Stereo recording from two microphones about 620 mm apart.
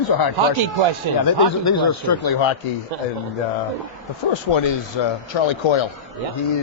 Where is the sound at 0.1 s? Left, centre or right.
Left.